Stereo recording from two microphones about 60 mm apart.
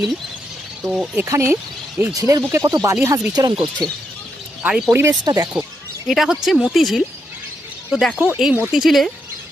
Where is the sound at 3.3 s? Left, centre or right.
Right.